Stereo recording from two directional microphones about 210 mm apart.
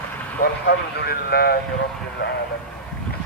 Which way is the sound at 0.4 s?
50° left (ahead or behind).